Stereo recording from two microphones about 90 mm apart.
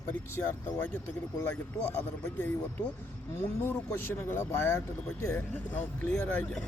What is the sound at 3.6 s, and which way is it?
Speech, 25° left (ahead or behind).